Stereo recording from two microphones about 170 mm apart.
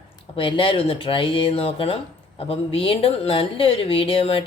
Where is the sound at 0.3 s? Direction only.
30° left (ahead or behind).